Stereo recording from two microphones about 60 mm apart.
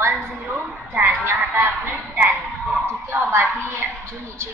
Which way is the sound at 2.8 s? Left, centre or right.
Right.